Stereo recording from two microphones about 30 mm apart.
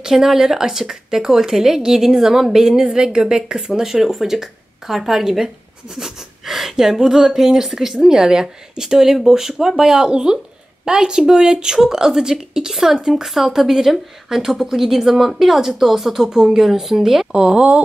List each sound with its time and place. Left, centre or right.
0.0 s a woman's voice: centre
17.3 s a woman's voice: right